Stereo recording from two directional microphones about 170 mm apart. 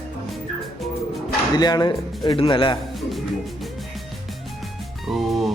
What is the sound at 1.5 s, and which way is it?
Speech, 25° left (ahead or behind).